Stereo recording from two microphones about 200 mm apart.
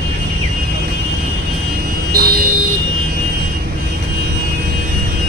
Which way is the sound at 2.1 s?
50° right (ahead or behind).